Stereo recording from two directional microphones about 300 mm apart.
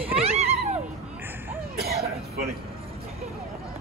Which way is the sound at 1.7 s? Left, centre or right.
Right.